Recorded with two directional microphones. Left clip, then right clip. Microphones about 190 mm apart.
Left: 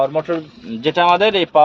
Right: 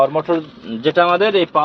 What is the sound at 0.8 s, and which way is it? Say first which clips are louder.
Speech: even; 35° left (ahead or behind).